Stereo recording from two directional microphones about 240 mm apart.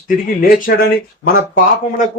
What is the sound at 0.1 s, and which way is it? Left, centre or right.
Speech, left.